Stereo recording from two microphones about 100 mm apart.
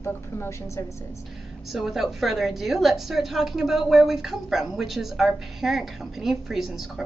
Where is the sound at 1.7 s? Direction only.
Centre (ahead or behind).